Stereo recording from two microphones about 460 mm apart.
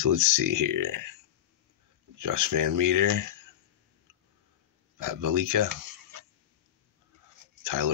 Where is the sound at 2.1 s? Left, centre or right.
Right.